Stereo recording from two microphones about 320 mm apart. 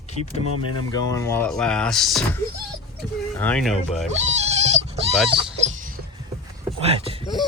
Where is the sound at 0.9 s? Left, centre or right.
Centre.